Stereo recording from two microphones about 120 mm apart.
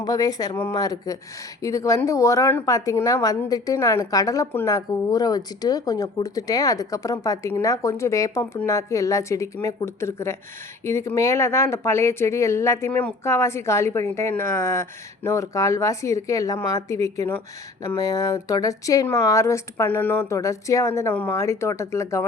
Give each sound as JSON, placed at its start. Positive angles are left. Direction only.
{"t": 0.0, "sound": "speech", "side_deg": 30}